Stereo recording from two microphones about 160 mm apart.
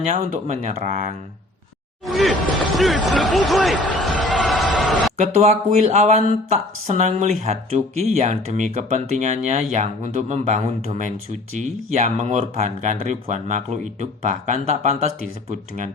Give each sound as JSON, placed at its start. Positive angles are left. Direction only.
{"t": 0.0, "sound": "speech", "side_deg": -45}
{"t": 2.1, "sound": "speech", "side_deg": 0}
{"t": 5.1, "sound": "speech", "side_deg": -45}